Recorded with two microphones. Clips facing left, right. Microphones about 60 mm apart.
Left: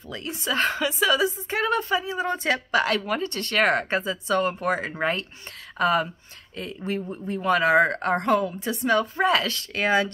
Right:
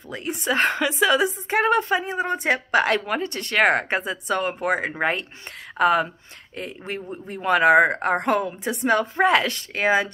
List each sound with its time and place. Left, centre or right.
0.1 s speech: right
0.6 s a woman's voice: right
7.2 s a woman's voice: right
9.8 s speech: centre